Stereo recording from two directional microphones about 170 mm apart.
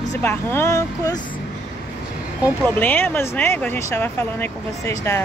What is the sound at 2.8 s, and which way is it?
Speech, 10° left (ahead or behind).